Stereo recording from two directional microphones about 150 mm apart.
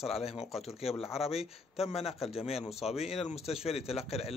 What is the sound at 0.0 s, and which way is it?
A man's voice, 40° left (ahead or behind).